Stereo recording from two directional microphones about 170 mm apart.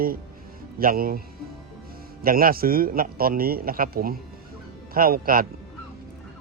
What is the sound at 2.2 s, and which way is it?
A man's voice, 60° right (ahead or behind).